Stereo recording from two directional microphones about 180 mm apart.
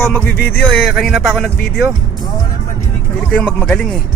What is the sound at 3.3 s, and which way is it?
Speech, 10° left (ahead or behind).